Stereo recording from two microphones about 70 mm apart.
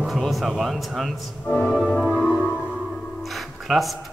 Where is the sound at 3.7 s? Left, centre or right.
Centre.